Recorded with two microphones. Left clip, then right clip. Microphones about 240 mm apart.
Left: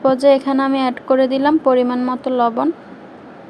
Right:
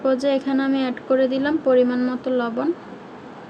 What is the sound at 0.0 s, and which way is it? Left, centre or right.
Speech, left.